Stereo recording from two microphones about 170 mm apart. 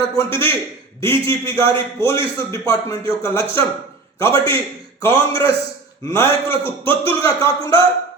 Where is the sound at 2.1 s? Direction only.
30° right (ahead or behind).